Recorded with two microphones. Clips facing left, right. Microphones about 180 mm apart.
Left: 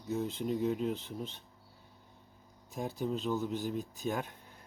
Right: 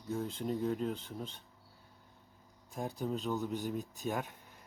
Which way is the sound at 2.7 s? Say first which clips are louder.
Left 2 dB; centre (ahead or behind).